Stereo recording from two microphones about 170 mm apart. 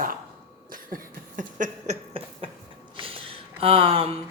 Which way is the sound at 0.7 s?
55° right (ahead or behind).